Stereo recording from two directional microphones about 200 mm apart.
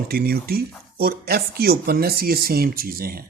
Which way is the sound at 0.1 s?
50° right (ahead or behind).